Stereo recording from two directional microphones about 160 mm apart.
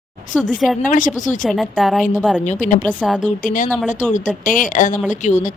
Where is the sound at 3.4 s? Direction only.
55° left (ahead or behind).